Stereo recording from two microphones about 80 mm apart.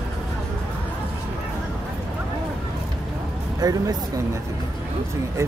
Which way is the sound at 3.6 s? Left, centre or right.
Right.